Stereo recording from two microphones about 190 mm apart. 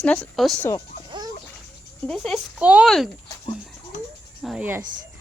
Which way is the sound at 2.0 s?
Centre (ahead or behind).